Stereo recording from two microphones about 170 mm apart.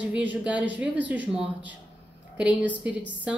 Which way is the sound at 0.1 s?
10° right (ahead or behind).